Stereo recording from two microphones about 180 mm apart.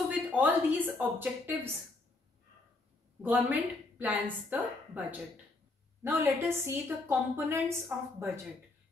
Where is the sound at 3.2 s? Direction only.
10° right (ahead or behind).